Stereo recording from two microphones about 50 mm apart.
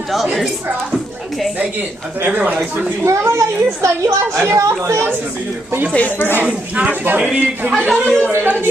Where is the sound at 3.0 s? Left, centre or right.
Right.